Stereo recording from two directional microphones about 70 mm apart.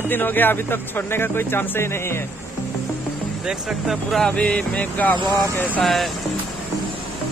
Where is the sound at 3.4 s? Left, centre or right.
Centre.